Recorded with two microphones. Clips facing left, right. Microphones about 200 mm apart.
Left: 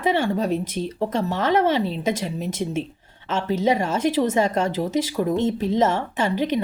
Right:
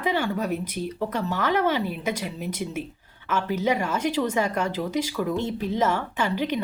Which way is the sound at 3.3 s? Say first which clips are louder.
Left 3 dB; 25° left (ahead or behind).